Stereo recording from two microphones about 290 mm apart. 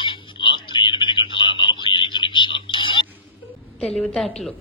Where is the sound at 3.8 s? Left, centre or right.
Centre.